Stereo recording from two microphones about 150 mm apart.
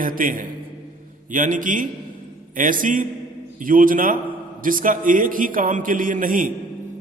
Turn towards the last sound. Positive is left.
turn(degrees=-65)  # may be behind; listen again after turning